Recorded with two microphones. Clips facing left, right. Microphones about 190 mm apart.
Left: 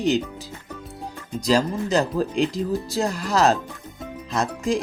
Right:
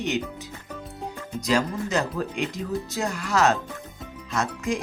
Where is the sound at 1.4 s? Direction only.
35° left (ahead or behind).